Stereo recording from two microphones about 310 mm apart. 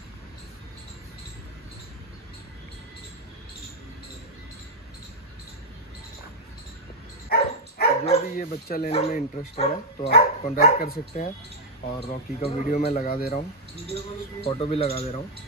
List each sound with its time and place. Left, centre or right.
7.2 s speech: left